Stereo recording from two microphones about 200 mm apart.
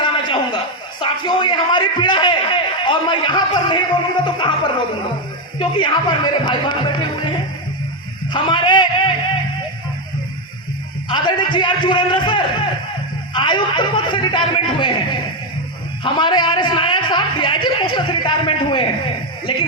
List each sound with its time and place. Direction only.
0.0 s a man's voice: 25° left (ahead or behind)
5.5 s a man's voice: 25° left (ahead or behind)
11.1 s a man's voice: 25° left (ahead or behind)